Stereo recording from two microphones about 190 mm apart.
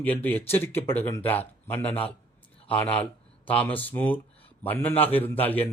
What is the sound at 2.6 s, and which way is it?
Speech, 10° left (ahead or behind).